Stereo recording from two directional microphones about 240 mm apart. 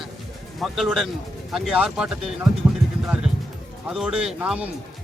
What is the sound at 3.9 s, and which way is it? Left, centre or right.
Speech, centre.